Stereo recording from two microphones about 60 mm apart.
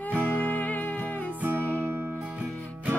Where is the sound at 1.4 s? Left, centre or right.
Right.